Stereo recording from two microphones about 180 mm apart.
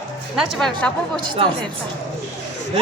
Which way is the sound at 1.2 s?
25° right (ahead or behind).